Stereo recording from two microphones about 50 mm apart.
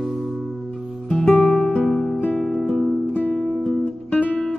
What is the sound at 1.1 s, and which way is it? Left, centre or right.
Music, left.